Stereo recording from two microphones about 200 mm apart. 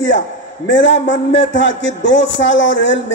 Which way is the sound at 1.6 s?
65° left (ahead or behind).